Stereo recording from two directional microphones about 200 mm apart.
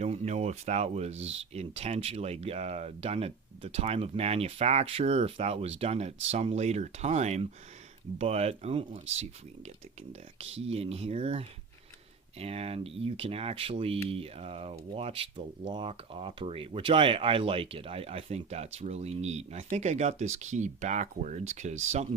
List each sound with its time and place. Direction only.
0.0 s speech: 35° right (ahead or behind)